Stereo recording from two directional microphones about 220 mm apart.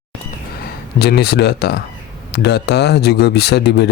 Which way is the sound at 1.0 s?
45° left (ahead or behind).